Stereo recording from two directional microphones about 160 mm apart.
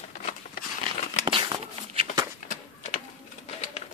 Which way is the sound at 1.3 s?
35° right (ahead or behind).